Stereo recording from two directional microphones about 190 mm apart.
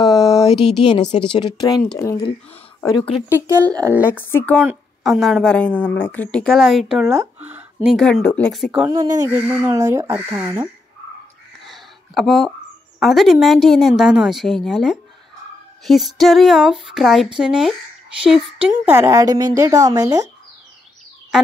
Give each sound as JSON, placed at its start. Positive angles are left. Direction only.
{"t": 0.0, "sound": "a sound", "side_deg": 20}
{"t": 1.3, "sound": "speech", "side_deg": 25}
{"t": 3.3, "sound": "speech", "side_deg": -15}
{"t": 4.1, "sound": "speech", "side_deg": 10}
{"t": 4.6, "sound": "a woman's voice", "side_deg": -5}
{"t": 8.8, "sound": "speech", "side_deg": -20}
{"t": 11.6, "sound": "a sound", "side_deg": 0}
{"t": 13.0, "sound": "a woman's voice", "side_deg": 0}
{"t": 18.7, "sound": "speech", "side_deg": -15}